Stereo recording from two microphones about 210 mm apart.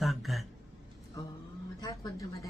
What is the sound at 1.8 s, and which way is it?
Speech, 15° left (ahead or behind).